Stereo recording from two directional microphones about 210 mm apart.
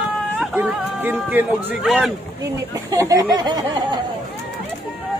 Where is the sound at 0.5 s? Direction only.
10° right (ahead or behind).